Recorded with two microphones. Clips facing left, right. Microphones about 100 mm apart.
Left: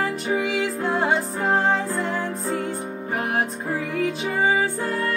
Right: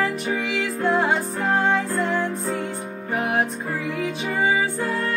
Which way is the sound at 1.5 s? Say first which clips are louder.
Even; 35° left (ahead or behind).